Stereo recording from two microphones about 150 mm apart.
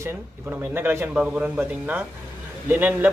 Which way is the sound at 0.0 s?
15° right (ahead or behind).